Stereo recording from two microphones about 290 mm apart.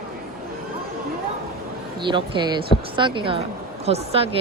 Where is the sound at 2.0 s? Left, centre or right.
Centre.